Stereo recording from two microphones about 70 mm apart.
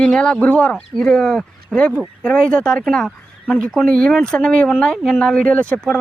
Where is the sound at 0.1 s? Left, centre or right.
Centre.